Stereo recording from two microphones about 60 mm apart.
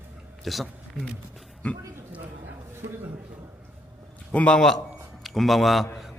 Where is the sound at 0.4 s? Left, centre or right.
Centre.